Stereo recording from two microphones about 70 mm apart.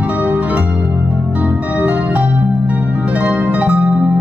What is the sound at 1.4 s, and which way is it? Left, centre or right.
Music, right.